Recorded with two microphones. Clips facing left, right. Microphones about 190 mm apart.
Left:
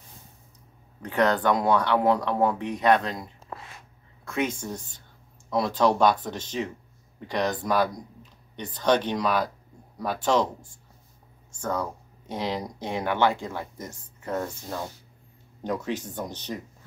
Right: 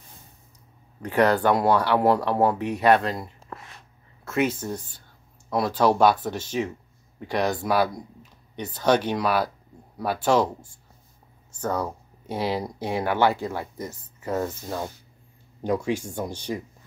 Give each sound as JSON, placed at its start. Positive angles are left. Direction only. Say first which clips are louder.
{"t": 1.0, "sound": "speech", "louder": "right 3 dB", "side_deg": -10}